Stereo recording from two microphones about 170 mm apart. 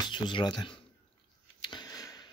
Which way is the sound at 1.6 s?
25° left (ahead or behind).